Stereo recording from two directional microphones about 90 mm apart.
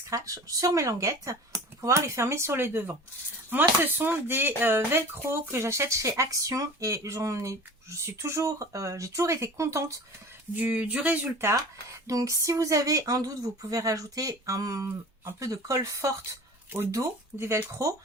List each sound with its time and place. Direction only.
0.1 s speech: 40° right (ahead or behind)
10.5 s speech: 15° right (ahead or behind)
11.3 s speech: 30° right (ahead or behind)